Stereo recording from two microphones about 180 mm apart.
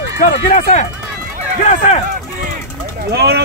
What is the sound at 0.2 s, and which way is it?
Speech, 50° left (ahead or behind).